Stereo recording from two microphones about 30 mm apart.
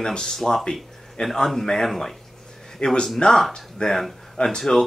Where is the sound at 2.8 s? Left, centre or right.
Left.